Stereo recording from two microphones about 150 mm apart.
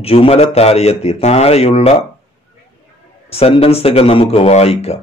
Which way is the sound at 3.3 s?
40° left (ahead or behind).